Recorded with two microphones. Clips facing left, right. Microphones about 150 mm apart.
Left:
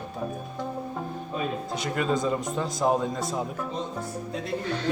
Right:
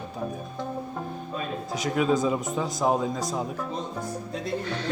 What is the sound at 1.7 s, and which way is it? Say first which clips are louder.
Speech: right 5 dB; centre (ahead or behind).